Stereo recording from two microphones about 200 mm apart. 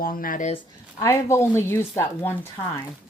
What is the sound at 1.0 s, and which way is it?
Speech, 15° left (ahead or behind).